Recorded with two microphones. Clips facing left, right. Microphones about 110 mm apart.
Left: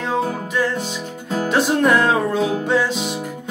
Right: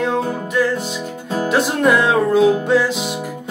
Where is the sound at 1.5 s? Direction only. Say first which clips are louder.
Right 1 dB; centre (ahead or behind).